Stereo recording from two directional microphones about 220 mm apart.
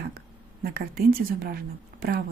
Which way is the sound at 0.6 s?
40° right (ahead or behind).